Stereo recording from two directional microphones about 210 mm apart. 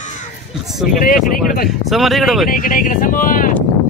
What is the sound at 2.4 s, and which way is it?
Speech, 40° left (ahead or behind).